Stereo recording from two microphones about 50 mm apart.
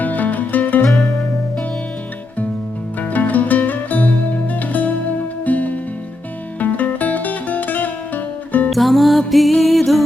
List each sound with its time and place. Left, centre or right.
0.0 s music: left
0.9 s music: centre
3.0 s music: left
8.7 s music: centre